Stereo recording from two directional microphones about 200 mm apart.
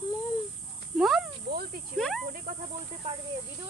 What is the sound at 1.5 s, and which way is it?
Snake, 55° right (ahead or behind).